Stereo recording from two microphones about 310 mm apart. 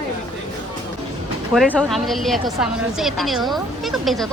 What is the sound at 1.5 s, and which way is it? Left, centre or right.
A woman's voice, centre.